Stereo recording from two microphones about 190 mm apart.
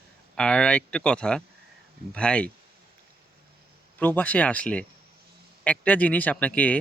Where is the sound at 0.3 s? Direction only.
5° left (ahead or behind).